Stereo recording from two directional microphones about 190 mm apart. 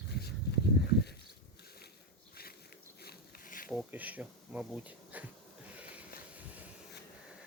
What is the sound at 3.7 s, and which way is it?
Speech, 5° right (ahead or behind).